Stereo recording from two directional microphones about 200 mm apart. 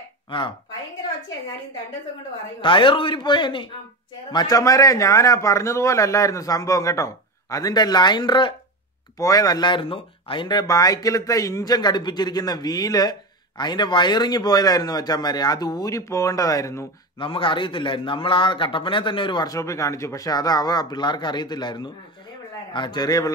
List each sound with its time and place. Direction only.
2.6 s a man's voice: 25° left (ahead or behind)